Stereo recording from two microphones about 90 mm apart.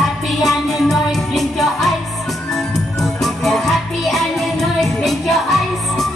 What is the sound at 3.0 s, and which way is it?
Music, centre (ahead or behind).